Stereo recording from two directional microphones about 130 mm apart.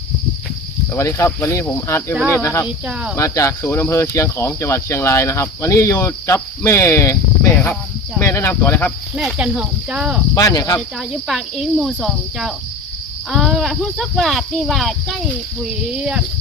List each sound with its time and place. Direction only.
0.9 s speech: 20° left (ahead or behind)
2.6 s speech: 10° right (ahead or behind)
3.2 s speech: 25° left (ahead or behind)
8.2 s speech: 20° left (ahead or behind)
9.1 s speech: 5° right (ahead or behind)
10.3 s speech: 30° left (ahead or behind)
10.8 s speech: centre (ahead or behind)